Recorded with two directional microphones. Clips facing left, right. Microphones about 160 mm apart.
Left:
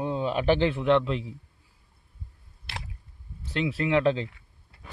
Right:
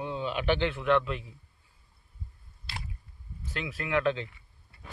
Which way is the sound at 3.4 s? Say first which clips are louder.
Left 9 dB; 30° left (ahead or behind).